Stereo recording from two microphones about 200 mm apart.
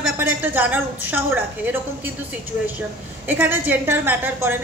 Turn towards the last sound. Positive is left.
turn(degrees=-10)  # may be behind; listen again after turning